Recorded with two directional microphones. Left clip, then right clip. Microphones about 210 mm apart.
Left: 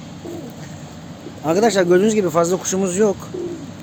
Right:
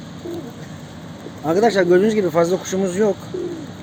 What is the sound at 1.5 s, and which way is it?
Speech, 5° left (ahead or behind).